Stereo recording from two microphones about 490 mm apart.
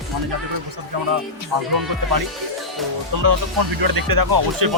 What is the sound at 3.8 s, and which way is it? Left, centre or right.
Speech, right.